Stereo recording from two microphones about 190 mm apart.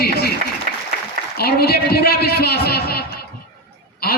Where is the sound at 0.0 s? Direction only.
55° left (ahead or behind).